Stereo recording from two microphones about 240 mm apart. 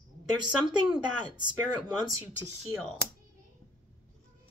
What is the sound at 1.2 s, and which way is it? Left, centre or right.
Speech, centre.